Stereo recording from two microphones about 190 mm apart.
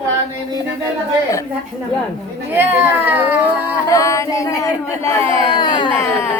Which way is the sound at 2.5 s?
10° right (ahead or behind).